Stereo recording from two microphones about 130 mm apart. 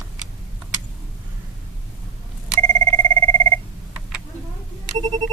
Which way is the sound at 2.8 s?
45° right (ahead or behind).